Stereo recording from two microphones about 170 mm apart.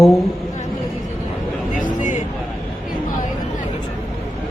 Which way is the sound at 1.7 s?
50° left (ahead or behind).